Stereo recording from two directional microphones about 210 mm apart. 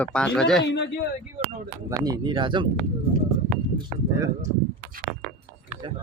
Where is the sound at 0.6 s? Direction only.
55° left (ahead or behind).